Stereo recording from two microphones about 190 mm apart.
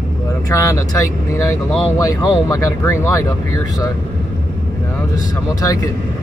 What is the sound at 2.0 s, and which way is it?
Speech, 20° left (ahead or behind).